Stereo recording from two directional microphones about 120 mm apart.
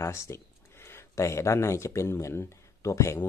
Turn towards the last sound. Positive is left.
turn(degrees=25)  # may be behind; listen again after turning